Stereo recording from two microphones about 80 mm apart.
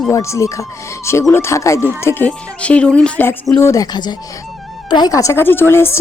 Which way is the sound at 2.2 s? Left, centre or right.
Centre.